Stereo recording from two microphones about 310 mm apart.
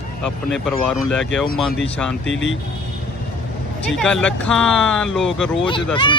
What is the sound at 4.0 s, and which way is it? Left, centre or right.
Speech, centre.